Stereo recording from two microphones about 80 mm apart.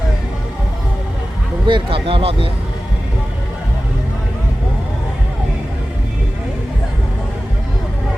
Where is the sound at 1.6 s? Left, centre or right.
Right.